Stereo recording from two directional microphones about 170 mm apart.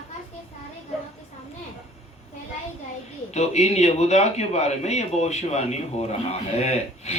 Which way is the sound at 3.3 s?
40° left (ahead or behind).